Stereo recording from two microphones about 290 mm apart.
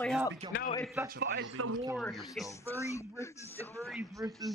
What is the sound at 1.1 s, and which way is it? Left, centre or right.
Speech, right.